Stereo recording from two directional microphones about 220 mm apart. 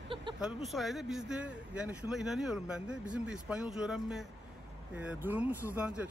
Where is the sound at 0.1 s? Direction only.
20° right (ahead or behind).